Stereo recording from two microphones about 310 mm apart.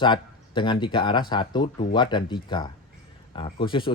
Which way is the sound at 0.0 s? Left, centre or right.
Centre.